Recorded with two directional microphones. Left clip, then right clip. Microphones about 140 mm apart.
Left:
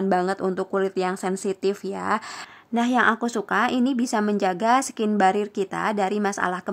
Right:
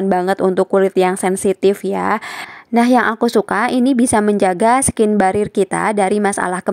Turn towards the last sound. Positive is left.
turn(degrees=-40)  # may be behind; listen again after turning